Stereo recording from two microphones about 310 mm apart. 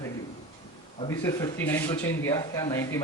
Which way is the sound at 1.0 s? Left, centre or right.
Centre.